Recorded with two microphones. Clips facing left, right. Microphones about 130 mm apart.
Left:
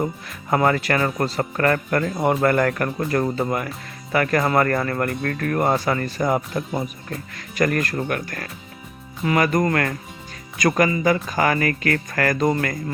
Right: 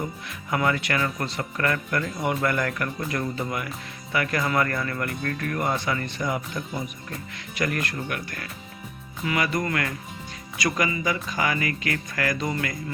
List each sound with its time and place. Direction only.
0.0 s speech: 40° left (ahead or behind)